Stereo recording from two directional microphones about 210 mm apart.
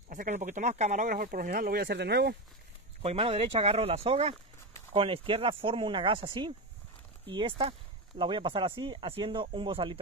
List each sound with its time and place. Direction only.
0.1 s speech: 35° right (ahead or behind); by 2.3 s 50° right (ahead or behind)
3.0 s speech: 30° right (ahead or behind)